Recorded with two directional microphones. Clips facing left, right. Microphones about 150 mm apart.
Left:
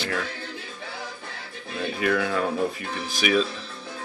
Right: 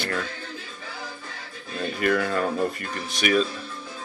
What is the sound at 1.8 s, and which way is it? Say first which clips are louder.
Speech: right 1 dB; centre (ahead or behind).